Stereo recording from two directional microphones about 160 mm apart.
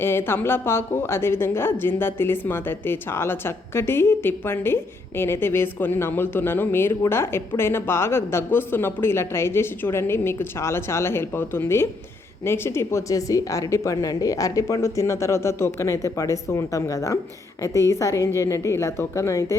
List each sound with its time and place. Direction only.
0.0 s a woman's voice: 15° left (ahead or behind)